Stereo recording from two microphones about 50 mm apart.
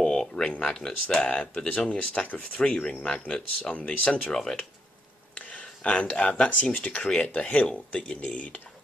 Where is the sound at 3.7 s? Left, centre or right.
Left.